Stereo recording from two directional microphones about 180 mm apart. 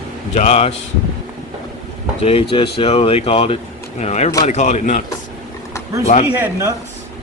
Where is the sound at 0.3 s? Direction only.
35° left (ahead or behind).